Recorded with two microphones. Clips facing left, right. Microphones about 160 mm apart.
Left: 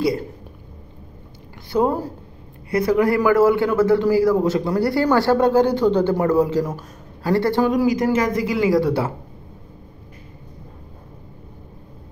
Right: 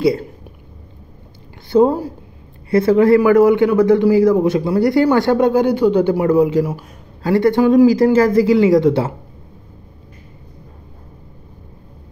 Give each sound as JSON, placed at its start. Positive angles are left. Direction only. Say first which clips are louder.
{"t": 1.7, "sound": "a man's voice", "louder": "right 6 dB", "side_deg": -25}
{"t": 7.8, "sound": "speech", "louder": "right 7 dB", "side_deg": -30}